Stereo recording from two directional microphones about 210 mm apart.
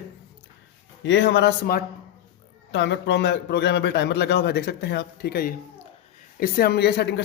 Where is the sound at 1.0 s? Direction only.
55° left (ahead or behind).